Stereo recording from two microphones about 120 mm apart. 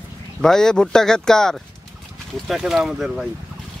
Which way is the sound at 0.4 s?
5° left (ahead or behind).